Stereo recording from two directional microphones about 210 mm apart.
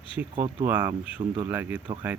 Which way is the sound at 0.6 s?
10° right (ahead or behind).